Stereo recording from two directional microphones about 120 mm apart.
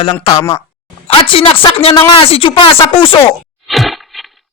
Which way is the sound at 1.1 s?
50° left (ahead or behind).